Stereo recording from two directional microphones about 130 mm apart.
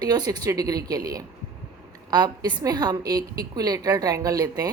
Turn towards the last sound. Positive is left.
turn(degrees=-30)  # may be behind; listen again after turning